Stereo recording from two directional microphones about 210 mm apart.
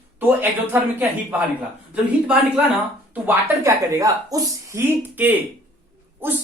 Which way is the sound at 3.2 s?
10° right (ahead or behind).